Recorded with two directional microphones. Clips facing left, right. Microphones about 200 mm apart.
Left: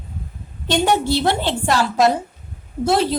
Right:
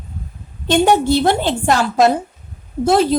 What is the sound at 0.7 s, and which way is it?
A woman's voice, 50° right (ahead or behind).